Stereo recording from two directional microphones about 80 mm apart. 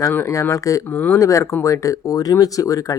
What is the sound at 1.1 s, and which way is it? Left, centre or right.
Speech, left.